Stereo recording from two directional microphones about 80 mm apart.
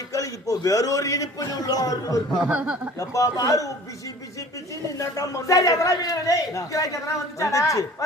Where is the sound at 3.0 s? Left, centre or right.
Left.